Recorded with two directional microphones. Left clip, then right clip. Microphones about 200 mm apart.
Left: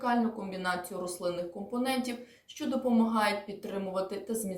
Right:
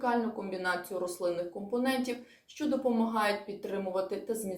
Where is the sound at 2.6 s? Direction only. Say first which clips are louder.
Even; 5° left (ahead or behind).